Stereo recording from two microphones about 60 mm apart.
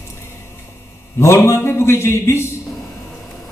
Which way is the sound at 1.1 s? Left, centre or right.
Left.